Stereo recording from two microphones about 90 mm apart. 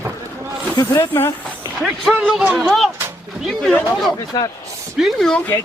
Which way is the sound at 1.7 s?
Centre (ahead or behind).